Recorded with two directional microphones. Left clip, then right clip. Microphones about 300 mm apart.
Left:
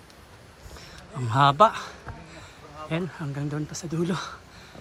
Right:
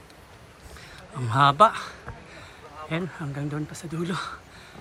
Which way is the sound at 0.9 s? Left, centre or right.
Centre.